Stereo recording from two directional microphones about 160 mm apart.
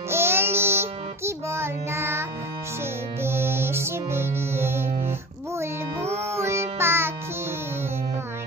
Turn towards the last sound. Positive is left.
turn(degrees=-15)  # may be behind; listen again after turning